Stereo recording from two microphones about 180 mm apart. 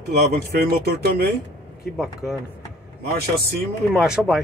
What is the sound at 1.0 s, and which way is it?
Speech, 60° right (ahead or behind).